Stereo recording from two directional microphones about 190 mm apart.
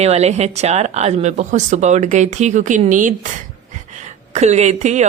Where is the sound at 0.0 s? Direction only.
35° right (ahead or behind).